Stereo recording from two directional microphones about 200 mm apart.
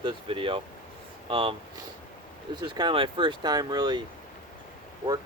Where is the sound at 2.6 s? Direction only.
20° right (ahead or behind).